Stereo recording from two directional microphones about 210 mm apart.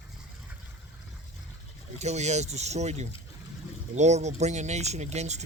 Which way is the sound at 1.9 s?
35° right (ahead or behind).